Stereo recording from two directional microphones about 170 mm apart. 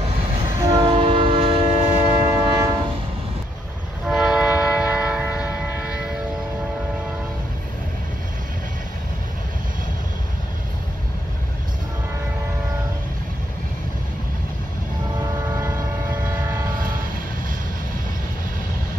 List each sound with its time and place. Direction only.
0.6 s train: 25° right (ahead or behind)
2.3 s train: 25° right (ahead or behind)
4.0 s train: 5° right (ahead or behind)
15.1 s train: 20° right (ahead or behind)